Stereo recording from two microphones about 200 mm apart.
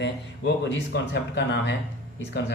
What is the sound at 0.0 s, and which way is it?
A man's voice, 60° left (ahead or behind).